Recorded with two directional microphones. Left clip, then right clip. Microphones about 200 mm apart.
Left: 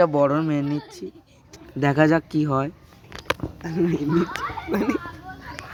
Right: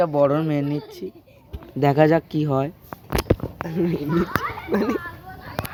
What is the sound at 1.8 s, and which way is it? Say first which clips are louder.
Speech: right 2 dB; 5° left (ahead or behind).